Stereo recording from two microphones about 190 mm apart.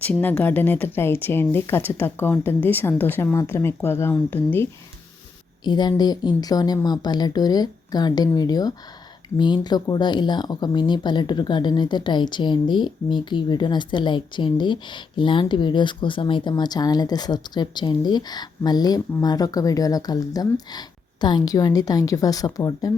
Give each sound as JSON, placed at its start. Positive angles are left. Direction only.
{"t": 0.0, "sound": "speech", "side_deg": 10}
{"t": 5.6, "sound": "speech", "side_deg": 20}